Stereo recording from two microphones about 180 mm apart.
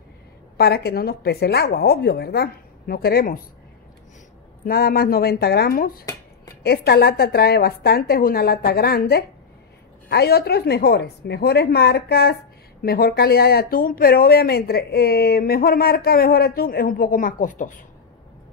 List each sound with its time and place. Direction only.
0.6 s speech: 60° left (ahead or behind)
4.6 s speech: 60° left (ahead or behind)